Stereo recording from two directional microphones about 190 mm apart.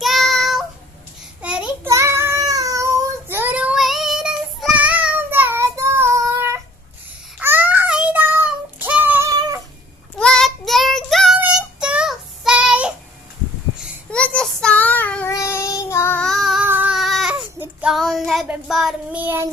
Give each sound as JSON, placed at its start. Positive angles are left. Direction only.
{"t": 0.0, "sound": "child singing", "side_deg": 0}
{"t": 1.9, "sound": "child singing", "side_deg": -15}
{"t": 9.3, "sound": "cat", "side_deg": -20}
{"t": 10.1, "sound": "child singing", "side_deg": 5}
{"t": 13.7, "sound": "child singing", "side_deg": 5}